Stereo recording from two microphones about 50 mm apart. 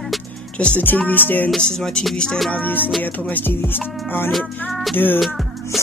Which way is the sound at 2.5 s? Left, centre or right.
Left.